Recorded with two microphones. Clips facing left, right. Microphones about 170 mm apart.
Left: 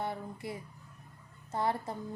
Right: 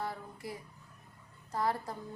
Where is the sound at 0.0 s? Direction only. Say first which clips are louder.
Left 3 dB; 25° left (ahead or behind).